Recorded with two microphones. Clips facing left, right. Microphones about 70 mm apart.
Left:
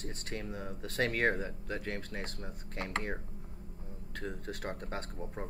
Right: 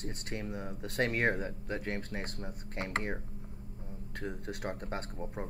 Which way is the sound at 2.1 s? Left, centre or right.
Right.